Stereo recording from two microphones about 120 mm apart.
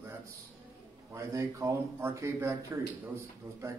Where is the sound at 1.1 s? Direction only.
25° right (ahead or behind).